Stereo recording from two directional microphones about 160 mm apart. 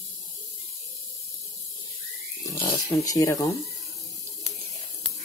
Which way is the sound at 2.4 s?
20° left (ahead or behind).